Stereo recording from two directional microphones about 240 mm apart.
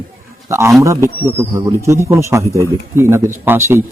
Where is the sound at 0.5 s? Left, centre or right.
Centre.